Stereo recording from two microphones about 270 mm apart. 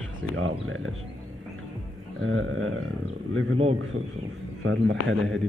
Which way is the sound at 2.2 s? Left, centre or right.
Right.